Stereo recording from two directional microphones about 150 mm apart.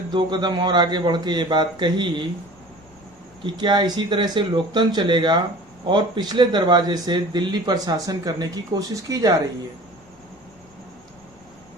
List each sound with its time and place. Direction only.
0.1 s speech: 30° right (ahead or behind)
3.4 s speech: 30° right (ahead or behind)